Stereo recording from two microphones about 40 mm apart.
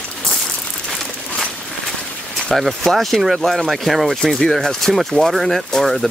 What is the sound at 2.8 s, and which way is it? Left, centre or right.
Speech, centre.